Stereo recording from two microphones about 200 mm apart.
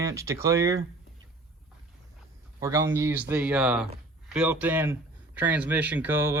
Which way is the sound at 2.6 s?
15° right (ahead or behind).